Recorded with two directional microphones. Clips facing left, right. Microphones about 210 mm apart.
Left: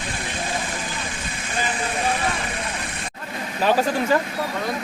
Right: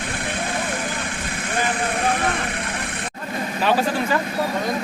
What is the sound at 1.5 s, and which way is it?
Vehicle, 60° right (ahead or behind).